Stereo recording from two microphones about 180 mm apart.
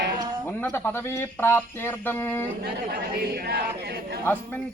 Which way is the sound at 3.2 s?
60° right (ahead or behind).